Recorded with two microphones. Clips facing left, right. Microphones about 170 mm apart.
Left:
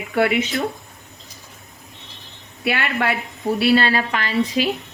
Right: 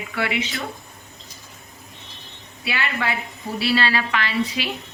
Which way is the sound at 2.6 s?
55° left (ahead or behind).